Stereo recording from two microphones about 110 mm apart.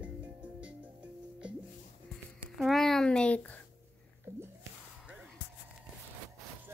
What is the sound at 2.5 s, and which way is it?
Speech, centre (ahead or behind).